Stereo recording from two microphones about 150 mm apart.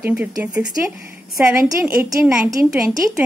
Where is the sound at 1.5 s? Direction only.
20° right (ahead or behind).